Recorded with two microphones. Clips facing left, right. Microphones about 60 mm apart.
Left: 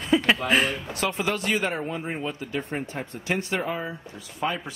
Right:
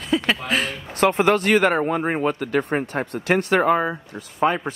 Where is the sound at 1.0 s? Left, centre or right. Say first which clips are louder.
Right 11 dB; right.